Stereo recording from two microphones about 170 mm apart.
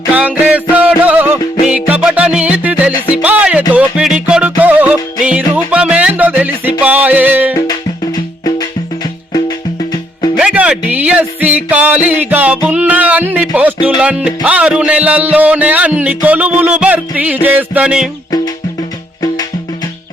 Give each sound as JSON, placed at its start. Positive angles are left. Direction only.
{"t": 0.1, "sound": "music", "side_deg": -10}
{"t": 7.7, "sound": "music", "side_deg": 20}
{"t": 10.3, "sound": "speech", "side_deg": -5}
{"t": 12.6, "sound": "music", "side_deg": -10}